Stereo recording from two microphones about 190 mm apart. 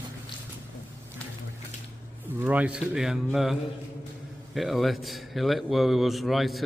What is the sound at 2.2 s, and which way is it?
Speech, 10° right (ahead or behind).